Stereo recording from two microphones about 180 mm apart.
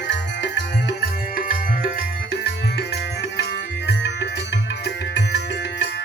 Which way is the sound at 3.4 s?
75° left (ahead or behind).